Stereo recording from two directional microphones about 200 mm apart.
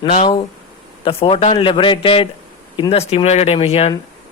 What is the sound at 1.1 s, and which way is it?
Speech, 30° left (ahead or behind).